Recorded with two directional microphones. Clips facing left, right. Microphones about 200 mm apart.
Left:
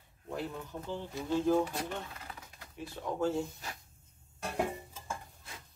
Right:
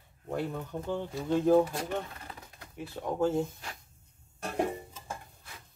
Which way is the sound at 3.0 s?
50° right (ahead or behind).